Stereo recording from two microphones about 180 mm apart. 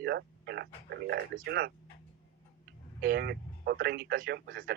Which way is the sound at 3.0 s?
55° right (ahead or behind).